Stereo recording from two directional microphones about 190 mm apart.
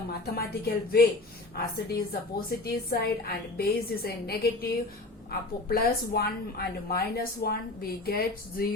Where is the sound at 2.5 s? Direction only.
55° left (ahead or behind).